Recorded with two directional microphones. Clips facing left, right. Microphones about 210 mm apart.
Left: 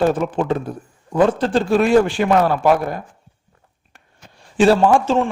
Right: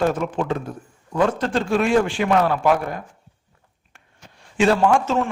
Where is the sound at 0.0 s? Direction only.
35° left (ahead or behind).